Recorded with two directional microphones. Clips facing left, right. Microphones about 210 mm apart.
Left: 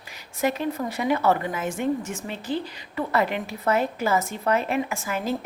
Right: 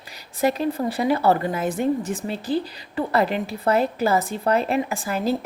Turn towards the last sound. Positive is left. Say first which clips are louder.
# right 4 dB
turn(degrees=-35)  # may be behind; listen again after turning